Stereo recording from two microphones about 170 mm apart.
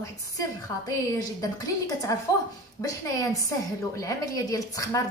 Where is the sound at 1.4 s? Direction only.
20° left (ahead or behind).